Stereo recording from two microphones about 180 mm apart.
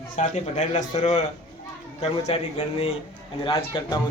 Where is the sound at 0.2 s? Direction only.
40° left (ahead or behind); by 3.9 s 25° left (ahead or behind).